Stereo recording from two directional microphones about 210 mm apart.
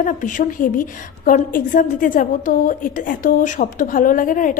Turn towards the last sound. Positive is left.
turn(degrees=40)  # may be behind; listen again after turning